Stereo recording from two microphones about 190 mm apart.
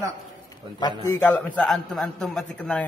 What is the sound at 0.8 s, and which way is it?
Speech, 20° left (ahead or behind).